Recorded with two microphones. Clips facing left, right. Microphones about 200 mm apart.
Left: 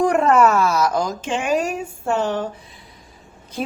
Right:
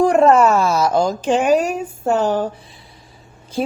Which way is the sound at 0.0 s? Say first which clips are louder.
Right 3 dB; 25° right (ahead or behind).